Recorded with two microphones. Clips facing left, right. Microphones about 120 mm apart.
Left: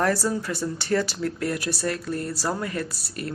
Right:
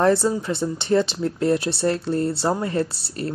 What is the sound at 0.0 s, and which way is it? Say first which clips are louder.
Speech: right 5 dB; 20° right (ahead or behind).